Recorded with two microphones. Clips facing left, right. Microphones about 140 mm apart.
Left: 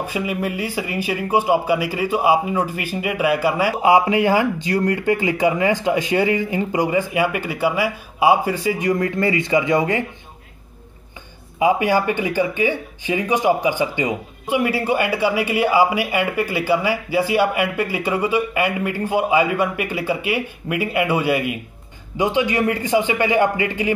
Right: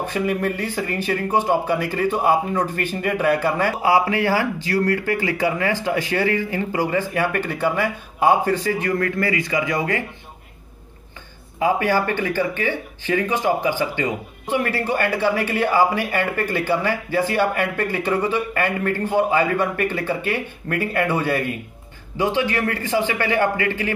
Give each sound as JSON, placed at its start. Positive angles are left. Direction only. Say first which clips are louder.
{"t": 0.0, "sound": "speech", "louder": "right 1 dB", "side_deg": 10}
{"t": 3.8, "sound": "speech", "louder": "left 4 dB", "side_deg": 20}
{"t": 11.6, "sound": "speech", "louder": "left 2 dB", "side_deg": 15}